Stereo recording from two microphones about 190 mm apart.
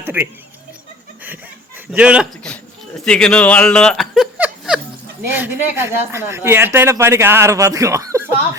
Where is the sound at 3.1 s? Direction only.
5° left (ahead or behind); by 8.2 s 15° right (ahead or behind).